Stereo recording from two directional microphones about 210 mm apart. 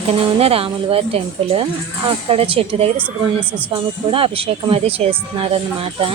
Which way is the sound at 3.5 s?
10° right (ahead or behind).